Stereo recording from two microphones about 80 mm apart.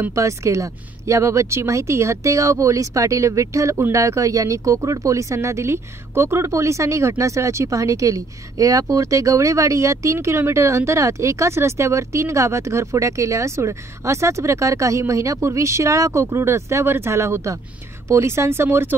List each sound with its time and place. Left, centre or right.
0.1 s speech: right